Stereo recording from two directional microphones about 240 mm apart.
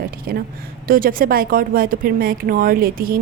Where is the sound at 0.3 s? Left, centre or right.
Right.